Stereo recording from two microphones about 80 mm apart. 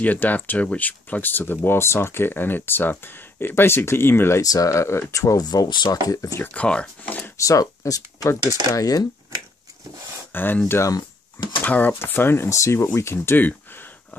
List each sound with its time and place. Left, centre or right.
0.0 s speech: left
4.4 s speech: left
5.4 s speech: left
6.4 s speech: centre
7.3 s speech: left
10.3 s speech: left
11.3 s speech: left
11.6 s speech: left